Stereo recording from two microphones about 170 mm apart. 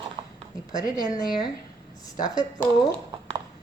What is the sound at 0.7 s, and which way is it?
A woman's voice, 20° left (ahead or behind).